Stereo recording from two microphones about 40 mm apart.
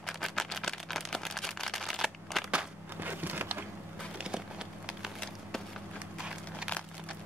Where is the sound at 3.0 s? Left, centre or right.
Right.